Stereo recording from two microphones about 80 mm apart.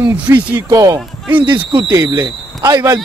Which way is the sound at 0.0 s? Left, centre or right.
Right.